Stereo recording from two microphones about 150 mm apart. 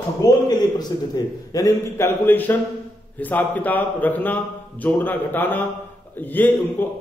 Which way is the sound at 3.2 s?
10° left (ahead or behind).